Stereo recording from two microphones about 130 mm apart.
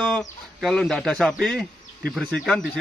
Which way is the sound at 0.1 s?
Centre (ahead or behind).